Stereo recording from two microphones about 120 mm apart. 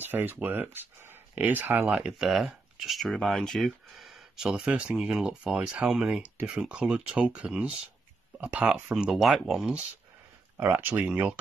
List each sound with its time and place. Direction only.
0.0 s speech: 15° right (ahead or behind)
10.6 s speech: 15° right (ahead or behind)